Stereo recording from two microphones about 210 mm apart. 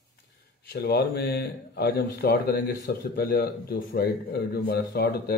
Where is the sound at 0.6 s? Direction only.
50° left (ahead or behind).